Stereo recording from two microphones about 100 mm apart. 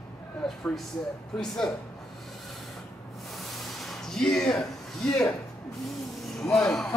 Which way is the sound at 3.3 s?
Centre (ahead or behind).